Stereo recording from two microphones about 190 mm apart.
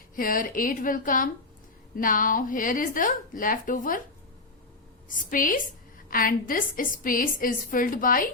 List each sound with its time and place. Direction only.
0.2 s a woman's voice: 45° left (ahead or behind)
5.0 s a woman's voice: 45° left (ahead or behind)